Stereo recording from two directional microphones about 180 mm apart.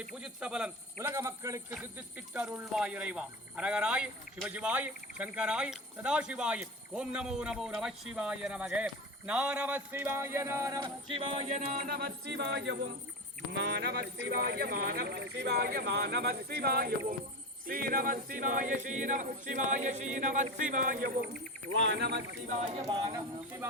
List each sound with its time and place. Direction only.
0.1 s speech: 5° right (ahead or behind)
10.8 s music: 30° right (ahead or behind)
11.6 s speech: 50° right (ahead or behind)
17.7 s singing: 50° right (ahead or behind)
21.8 s speech: 75° right (ahead or behind)
22.6 s speech: 25° right (ahead or behind)